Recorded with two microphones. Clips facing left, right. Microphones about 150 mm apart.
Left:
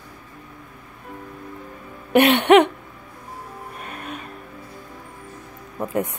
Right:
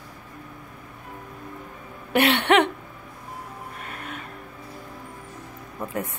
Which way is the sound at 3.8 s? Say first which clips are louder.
Left 4 dB; 20° left (ahead or behind).